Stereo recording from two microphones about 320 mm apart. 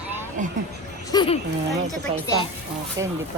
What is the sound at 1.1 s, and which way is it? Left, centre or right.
Speech, centre.